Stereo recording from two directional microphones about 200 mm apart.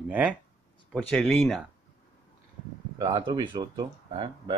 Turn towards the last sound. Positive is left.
turn(degrees=-25)  # may be behind; listen again after turning